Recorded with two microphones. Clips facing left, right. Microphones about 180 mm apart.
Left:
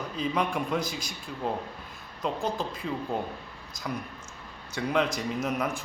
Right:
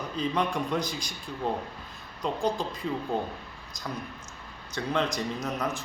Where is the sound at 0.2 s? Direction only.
5° left (ahead or behind).